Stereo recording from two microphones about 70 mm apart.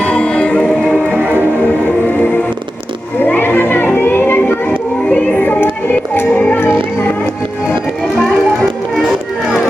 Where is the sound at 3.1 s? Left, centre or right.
Left.